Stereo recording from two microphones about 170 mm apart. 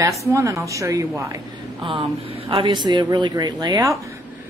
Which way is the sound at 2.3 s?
35° right (ahead or behind).